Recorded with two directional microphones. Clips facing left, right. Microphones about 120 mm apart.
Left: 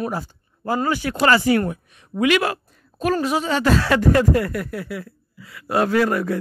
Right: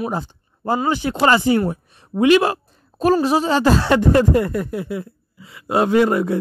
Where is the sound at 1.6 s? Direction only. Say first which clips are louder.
Right 3 dB; 30° right (ahead or behind).